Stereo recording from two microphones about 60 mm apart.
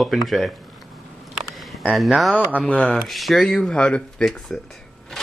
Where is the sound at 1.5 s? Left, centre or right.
Centre.